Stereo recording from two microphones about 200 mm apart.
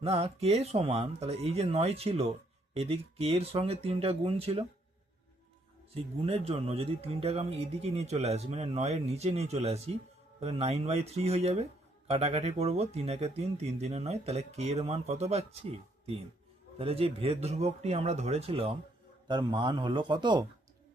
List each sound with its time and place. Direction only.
0.0 s speech: 30° right (ahead or behind)
5.9 s speech: 30° right (ahead or behind)
16.7 s speech: 30° right (ahead or behind)